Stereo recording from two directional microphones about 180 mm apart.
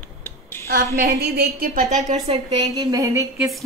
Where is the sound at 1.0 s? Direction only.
65° right (ahead or behind).